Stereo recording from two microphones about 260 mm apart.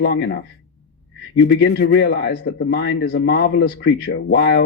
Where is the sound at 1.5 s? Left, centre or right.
Left.